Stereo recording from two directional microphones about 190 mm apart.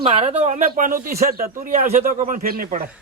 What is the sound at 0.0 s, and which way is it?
A man's voice, 35° right (ahead or behind).